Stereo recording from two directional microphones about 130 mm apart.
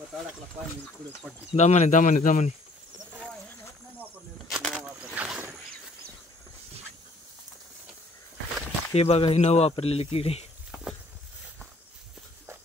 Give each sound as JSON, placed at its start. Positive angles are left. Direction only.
{"t": 1.5, "sound": "speech", "side_deg": 65}
{"t": 4.5, "sound": "a sound", "side_deg": 0}
{"t": 8.9, "sound": "speech", "side_deg": 50}